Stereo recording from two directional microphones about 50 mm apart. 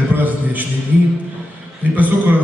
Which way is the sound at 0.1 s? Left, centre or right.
Right.